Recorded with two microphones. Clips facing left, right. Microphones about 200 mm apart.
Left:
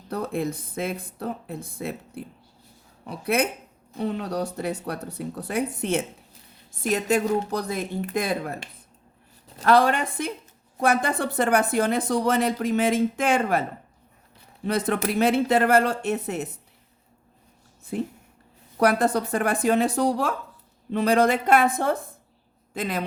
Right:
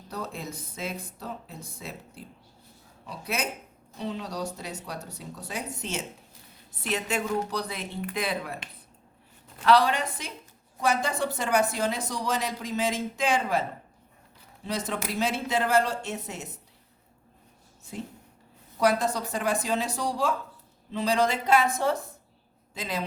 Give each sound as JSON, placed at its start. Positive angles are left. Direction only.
{"t": 0.1, "sound": "speech", "side_deg": 55}
{"t": 6.8, "sound": "speech", "side_deg": 40}
{"t": 9.6, "sound": "speech", "side_deg": 50}
{"t": 17.9, "sound": "speech", "side_deg": 55}